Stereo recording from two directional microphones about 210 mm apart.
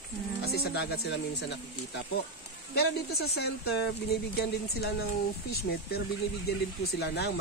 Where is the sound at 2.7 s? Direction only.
50° left (ahead or behind).